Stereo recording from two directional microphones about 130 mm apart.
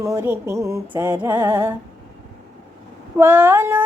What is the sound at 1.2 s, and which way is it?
Female singing, 15° right (ahead or behind).